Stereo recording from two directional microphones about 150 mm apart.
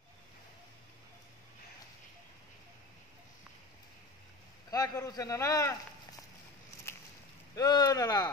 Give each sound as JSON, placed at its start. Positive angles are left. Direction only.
{"t": 4.6, "sound": "a man's voice", "side_deg": 25}
{"t": 7.5, "sound": "a man's voice", "side_deg": 25}